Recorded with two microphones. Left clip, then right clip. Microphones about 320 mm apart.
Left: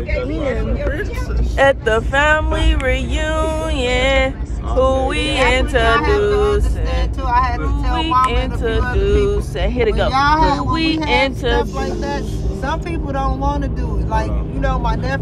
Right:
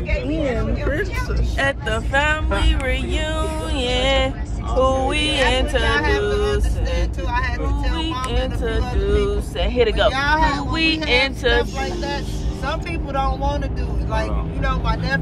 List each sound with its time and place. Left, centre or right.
0.4 s speech: centre
1.6 s speech: centre
7.9 s speech: centre
14.6 s speech: centre